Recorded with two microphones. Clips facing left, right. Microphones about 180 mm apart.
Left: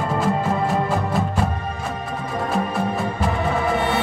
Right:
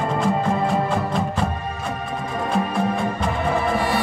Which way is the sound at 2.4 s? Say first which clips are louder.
Right 1 dB; 5° left (ahead or behind).